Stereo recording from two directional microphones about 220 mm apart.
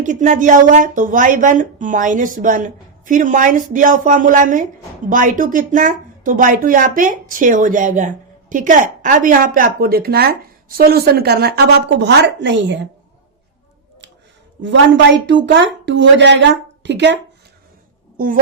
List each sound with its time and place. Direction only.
0.0 s a woman's voice: 35° right (ahead or behind); by 12.7 s 50° right (ahead or behind)
15.3 s a woman's voice: 55° right (ahead or behind)